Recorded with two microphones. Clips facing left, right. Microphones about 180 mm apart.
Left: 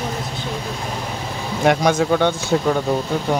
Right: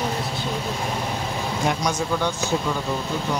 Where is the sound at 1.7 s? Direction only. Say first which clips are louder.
Left 10 dB; 65° left (ahead or behind).